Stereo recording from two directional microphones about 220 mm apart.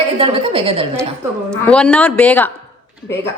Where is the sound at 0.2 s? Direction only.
25° right (ahead or behind).